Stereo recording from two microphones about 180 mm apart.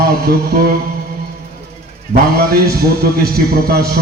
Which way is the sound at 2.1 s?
60° right (ahead or behind).